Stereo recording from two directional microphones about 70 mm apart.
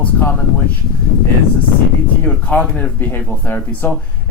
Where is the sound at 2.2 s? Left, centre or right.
Centre.